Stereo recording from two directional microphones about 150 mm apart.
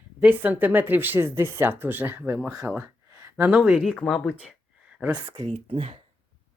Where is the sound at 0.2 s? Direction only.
10° right (ahead or behind).